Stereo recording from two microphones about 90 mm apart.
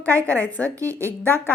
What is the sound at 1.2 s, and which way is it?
Speech, 25° left (ahead or behind).